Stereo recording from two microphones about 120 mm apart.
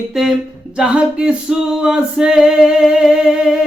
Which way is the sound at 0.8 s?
10° right (ahead or behind).